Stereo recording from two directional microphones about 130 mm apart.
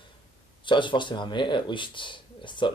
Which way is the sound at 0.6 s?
40° left (ahead or behind).